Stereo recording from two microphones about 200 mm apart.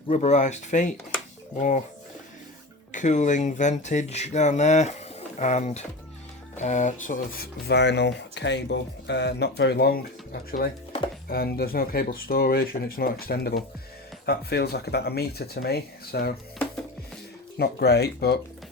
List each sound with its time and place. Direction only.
0.1 s speech: 35° left (ahead or behind)
2.9 s speech: 40° left (ahead or behind)
7.7 s speech: 60° left (ahead or behind)
17.6 s speech: 55° left (ahead or behind)